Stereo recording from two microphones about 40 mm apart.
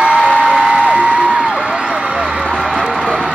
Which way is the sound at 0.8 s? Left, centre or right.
Right.